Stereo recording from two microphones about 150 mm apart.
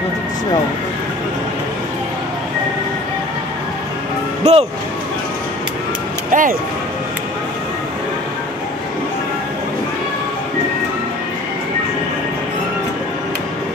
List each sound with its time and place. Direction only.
4.4 s music: 45° right (ahead or behind)
6.3 s music: 60° right (ahead or behind)